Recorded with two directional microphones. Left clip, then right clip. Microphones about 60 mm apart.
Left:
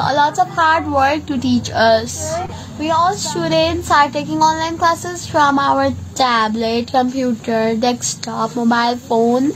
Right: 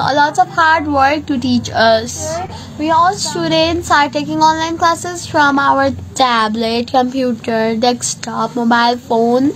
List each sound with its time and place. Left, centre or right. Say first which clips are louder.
0.0 s a woman's voice: right 2 dB; right
1.7 s a woman's voice: right 2 dB; right
2.8 s a woman's voice: right 3 dB; centre; by 9.4 s right